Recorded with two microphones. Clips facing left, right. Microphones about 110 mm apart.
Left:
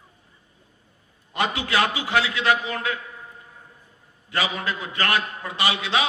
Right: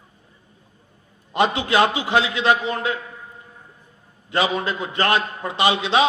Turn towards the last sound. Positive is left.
turn(degrees=-25)  # may be behind; listen again after turning